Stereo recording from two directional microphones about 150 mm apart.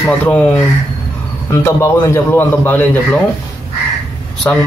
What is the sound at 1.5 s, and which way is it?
A man's voice, 20° left (ahead or behind).